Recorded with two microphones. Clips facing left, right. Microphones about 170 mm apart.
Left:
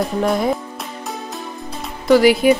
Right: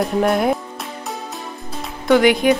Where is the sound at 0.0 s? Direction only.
Centre (ahead or behind).